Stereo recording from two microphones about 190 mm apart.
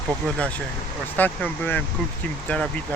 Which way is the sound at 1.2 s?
10° left (ahead or behind).